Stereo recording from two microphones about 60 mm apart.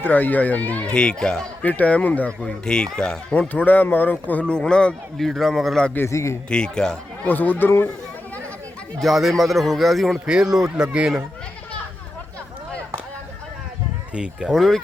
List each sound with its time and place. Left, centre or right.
0.0 s speech: left
0.9 s speech: centre
1.6 s speech: left
2.5 s speech: centre
3.5 s speech: left
4.5 s speech: centre
5.1 s a man's voice: centre
6.1 s speech: left
6.5 s speech: centre
7.3 s speech: left
9.0 s a man's voice: centre
10.2 s speech: centre
14.1 s speech: centre
14.5 s a man's voice: centre